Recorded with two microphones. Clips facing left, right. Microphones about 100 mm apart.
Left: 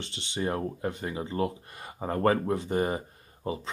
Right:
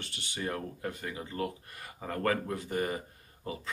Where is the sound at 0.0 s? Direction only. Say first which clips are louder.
Left 5 dB; 25° left (ahead or behind).